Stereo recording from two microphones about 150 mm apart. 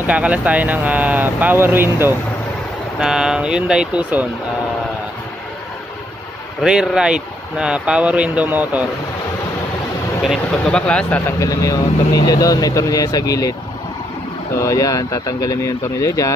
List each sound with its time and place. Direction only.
0.0 s speech: 10° right (ahead or behind)
3.0 s speech: 5° right (ahead or behind)
6.6 s speech: 5° right (ahead or behind)
10.2 s speech: centre (ahead or behind); by 13.6 s 25° left (ahead or behind)
14.6 s speech: 20° left (ahead or behind)